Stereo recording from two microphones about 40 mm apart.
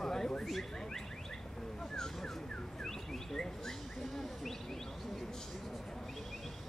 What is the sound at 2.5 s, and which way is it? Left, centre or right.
Car alarm, left.